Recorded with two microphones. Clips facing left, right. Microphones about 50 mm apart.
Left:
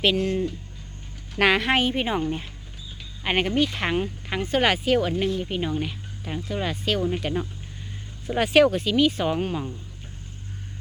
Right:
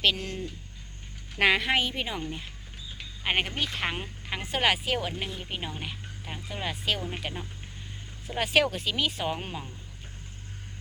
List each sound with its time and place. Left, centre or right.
0.0 s speech: centre
1.4 s a woman's voice: left
1.8 s speech: left
3.2 s speech: centre